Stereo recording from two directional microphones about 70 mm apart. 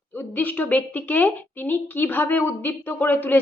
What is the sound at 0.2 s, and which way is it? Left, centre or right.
A woman's voice, left.